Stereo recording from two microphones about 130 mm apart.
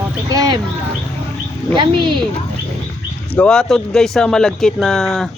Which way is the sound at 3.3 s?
10° left (ahead or behind).